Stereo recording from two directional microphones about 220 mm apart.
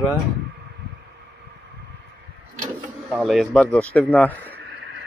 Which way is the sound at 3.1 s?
Centre (ahead or behind).